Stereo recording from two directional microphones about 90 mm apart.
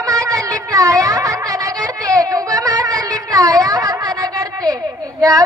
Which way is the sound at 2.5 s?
40° right (ahead or behind).